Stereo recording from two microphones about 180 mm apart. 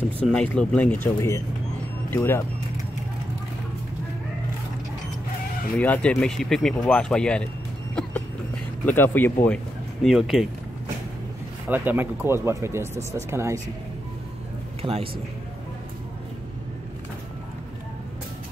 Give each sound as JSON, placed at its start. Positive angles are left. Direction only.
{"t": 0.3, "sound": "speech", "side_deg": 5}
{"t": 5.8, "sound": "speech", "side_deg": 5}
{"t": 8.8, "sound": "speech", "side_deg": 10}
{"t": 10.0, "sound": "speech", "side_deg": 0}
{"t": 11.7, "sound": "speech", "side_deg": -10}
{"t": 14.8, "sound": "a man's voice", "side_deg": -35}